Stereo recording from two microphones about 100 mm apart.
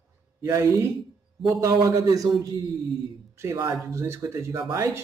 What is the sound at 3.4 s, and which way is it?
A woman's voice, 30° right (ahead or behind).